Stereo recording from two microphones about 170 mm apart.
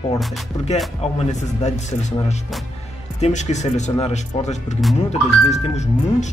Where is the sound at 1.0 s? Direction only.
45° left (ahead or behind).